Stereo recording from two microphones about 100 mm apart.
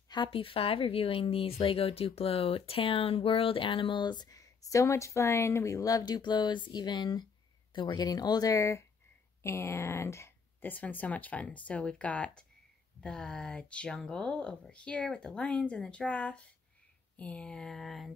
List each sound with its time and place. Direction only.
0.1 s speech: 60° left (ahead or behind); by 18.1 s centre (ahead or behind)